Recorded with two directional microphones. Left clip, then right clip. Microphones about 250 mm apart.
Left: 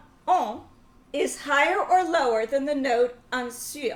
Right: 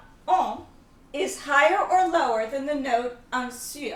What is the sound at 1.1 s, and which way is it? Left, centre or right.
A woman's voice, left.